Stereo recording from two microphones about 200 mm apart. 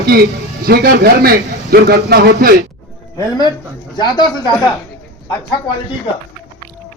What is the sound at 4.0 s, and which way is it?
Speech, 20° left (ahead or behind).